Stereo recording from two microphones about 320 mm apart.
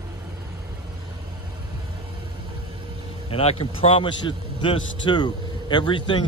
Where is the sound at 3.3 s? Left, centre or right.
Centre.